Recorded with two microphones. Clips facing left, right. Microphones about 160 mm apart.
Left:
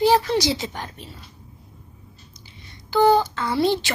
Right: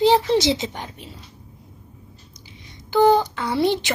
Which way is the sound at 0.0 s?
20° right (ahead or behind).